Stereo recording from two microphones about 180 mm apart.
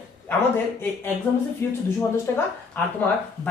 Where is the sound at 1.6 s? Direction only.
15° left (ahead or behind).